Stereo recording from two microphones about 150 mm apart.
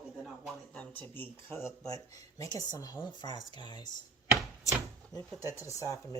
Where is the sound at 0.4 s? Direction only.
5° left (ahead or behind); by 3.8 s 30° left (ahead or behind).